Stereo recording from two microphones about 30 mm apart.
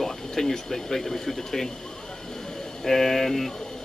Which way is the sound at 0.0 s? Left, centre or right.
Centre.